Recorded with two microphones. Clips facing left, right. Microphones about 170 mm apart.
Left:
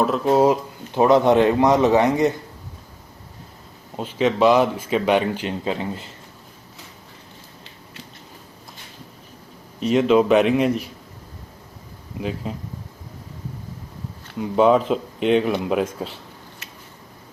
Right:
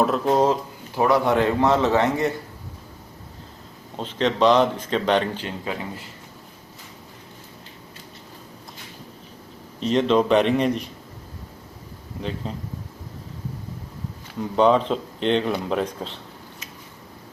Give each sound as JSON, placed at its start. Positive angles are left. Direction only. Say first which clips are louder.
{"t": 0.0, "sound": "speech", "louder": "left 2 dB", "side_deg": 0}
{"t": 0.9, "sound": "a man's voice", "louder": "left 4 dB", "side_deg": 20}
{"t": 3.9, "sound": "speech", "louder": "left 3 dB", "side_deg": 10}
{"t": 9.8, "sound": "speech", "louder": "left 3 dB", "side_deg": 10}
{"t": 12.4, "sound": "speech", "louder": "left 2 dB", "side_deg": 5}
{"t": 14.3, "sound": "speech", "louder": "left 2 dB", "side_deg": 5}